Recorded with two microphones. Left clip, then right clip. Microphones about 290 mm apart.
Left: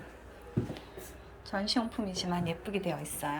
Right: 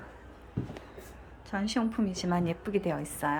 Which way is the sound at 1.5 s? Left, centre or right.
Centre.